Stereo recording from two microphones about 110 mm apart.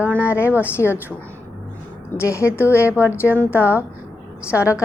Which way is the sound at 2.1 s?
25° left (ahead or behind).